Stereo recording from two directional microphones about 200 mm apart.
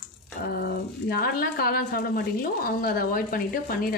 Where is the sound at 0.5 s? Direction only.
50° left (ahead or behind).